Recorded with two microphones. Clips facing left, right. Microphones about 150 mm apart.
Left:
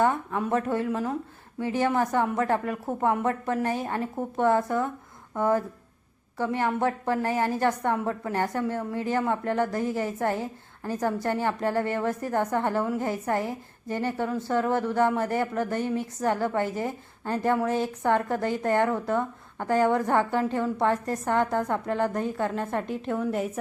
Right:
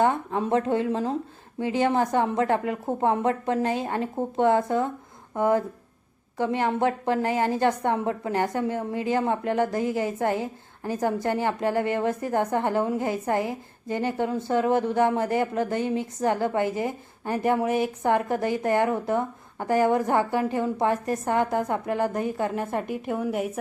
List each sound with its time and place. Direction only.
0.0 s a woman's voice: 25° right (ahead or behind)